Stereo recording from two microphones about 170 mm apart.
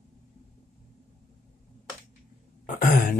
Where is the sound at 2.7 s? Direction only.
55° left (ahead or behind).